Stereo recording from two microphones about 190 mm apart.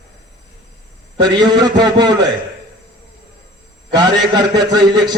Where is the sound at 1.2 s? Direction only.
25° right (ahead or behind).